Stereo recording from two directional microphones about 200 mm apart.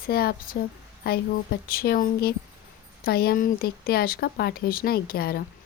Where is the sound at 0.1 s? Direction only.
50° left (ahead or behind).